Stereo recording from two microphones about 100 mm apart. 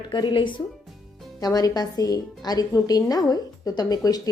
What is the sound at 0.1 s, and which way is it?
Speech, 50° left (ahead or behind).